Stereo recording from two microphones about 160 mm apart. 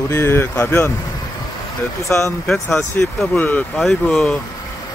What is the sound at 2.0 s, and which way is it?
Speech, 20° left (ahead or behind).